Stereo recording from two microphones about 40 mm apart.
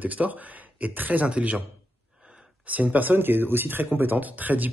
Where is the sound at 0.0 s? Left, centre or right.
Right.